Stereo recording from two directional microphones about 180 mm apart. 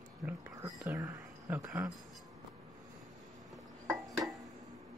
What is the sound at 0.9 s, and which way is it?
Speech, 20° right (ahead or behind).